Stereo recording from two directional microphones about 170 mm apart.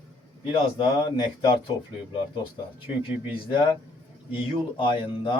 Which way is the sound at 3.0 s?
30° left (ahead or behind).